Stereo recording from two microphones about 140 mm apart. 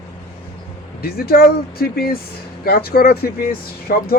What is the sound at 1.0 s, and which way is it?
Speech, 90° left.